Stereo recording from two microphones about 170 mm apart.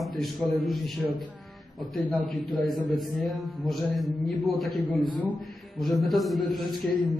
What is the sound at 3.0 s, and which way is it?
Speech, centre (ahead or behind).